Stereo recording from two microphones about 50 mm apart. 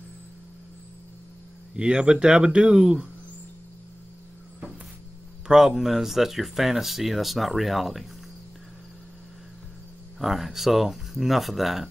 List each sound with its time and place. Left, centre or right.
1.8 s speech: centre
5.5 s speech: centre
10.1 s speech: centre